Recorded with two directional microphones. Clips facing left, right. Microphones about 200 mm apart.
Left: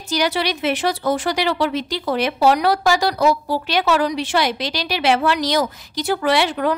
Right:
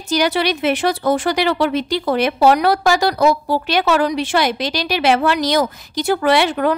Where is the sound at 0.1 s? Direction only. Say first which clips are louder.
Right 3 dB; 55° right (ahead or behind).